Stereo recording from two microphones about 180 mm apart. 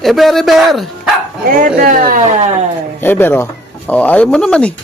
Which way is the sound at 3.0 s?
10° left (ahead or behind).